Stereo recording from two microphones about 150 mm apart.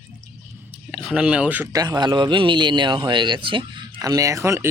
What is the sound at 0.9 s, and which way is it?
Speech, 5° right (ahead or behind).